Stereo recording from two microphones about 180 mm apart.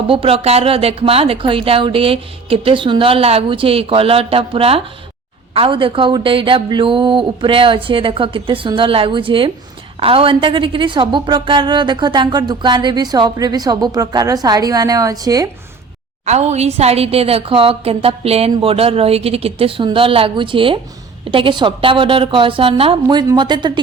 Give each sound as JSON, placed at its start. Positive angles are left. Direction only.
{"t": 0.1, "sound": "a woman's voice", "side_deg": -30}
{"t": 16.2, "sound": "a woman's voice", "side_deg": -40}